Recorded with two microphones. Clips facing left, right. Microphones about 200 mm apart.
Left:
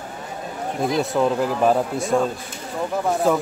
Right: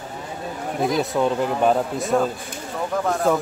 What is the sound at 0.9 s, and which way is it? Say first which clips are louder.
Speech: left 1 dB; centre (ahead or behind).